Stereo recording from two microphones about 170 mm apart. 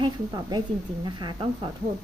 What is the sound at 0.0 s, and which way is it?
A woman's voice, 25° right (ahead or behind).